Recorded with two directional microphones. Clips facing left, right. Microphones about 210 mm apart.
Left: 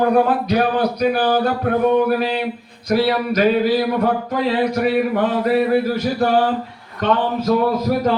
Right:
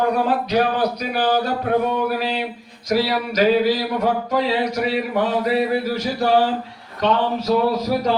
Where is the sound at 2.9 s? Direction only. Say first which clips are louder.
Left 3 dB; 55° left (ahead or behind).